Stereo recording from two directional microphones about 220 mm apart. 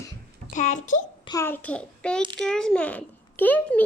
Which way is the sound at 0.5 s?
35° left (ahead or behind).